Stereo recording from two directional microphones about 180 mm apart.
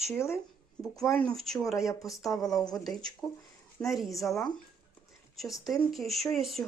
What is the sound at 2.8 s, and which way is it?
Speech, 5° left (ahead or behind).